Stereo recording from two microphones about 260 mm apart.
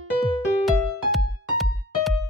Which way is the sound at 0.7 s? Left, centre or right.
Centre.